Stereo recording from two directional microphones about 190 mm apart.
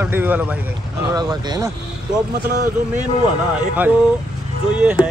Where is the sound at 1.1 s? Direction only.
20° right (ahead or behind).